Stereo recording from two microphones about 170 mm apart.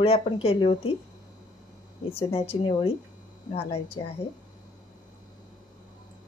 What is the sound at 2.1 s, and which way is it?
A woman's voice, 35° left (ahead or behind).